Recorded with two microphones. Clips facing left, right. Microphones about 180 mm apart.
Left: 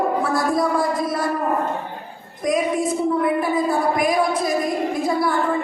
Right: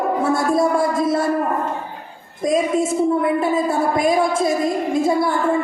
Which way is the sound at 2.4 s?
25° right (ahead or behind).